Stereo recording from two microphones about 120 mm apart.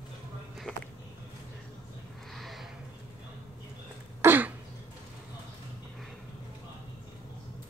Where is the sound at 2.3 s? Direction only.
Centre (ahead or behind).